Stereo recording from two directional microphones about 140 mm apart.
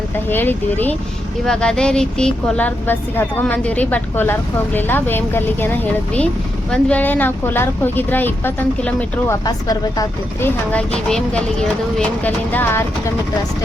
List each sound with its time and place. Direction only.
0.3 s speech: 15° left (ahead or behind)
9.5 s speech: 25° left (ahead or behind)
10.7 s speech: 10° left (ahead or behind)